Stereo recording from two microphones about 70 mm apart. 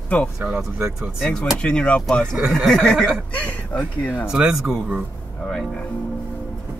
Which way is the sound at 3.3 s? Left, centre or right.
Centre.